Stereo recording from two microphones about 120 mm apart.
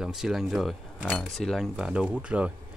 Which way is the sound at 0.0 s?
5° right (ahead or behind).